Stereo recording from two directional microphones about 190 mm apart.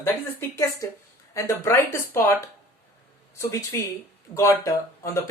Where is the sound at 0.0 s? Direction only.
15° left (ahead or behind).